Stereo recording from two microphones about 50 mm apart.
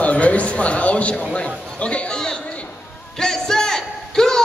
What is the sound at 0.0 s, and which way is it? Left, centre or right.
A man's voice, left.